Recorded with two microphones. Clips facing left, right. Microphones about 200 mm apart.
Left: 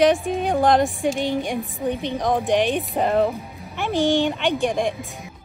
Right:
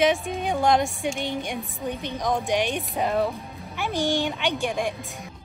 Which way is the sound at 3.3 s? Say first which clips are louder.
Left 3 dB; centre (ahead or behind).